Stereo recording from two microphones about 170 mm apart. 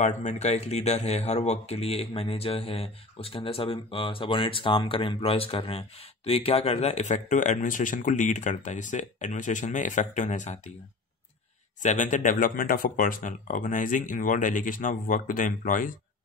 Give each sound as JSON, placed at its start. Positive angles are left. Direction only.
{"t": 0.0, "sound": "speech", "side_deg": 45}
{"t": 11.8, "sound": "speech", "side_deg": 45}